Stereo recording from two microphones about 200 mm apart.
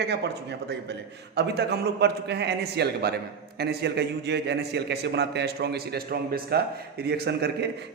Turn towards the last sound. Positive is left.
turn(degrees=-55)  # may be behind; listen again after turning